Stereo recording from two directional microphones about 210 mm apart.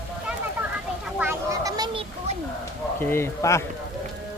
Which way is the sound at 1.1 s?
10° right (ahead or behind).